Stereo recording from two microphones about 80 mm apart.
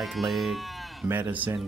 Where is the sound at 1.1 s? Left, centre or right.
Right.